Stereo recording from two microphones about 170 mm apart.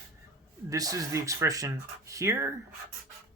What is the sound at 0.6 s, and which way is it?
Speech, 20° right (ahead or behind).